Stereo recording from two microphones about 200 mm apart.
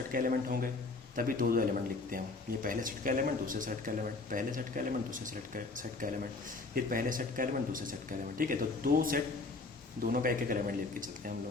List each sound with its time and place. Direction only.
0.1 s a man's voice: 45° right (ahead or behind)